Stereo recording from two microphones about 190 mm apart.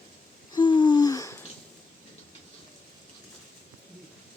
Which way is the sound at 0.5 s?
25° left (ahead or behind).